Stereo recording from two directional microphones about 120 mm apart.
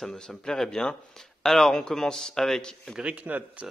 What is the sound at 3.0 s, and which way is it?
Speech, 10° right (ahead or behind).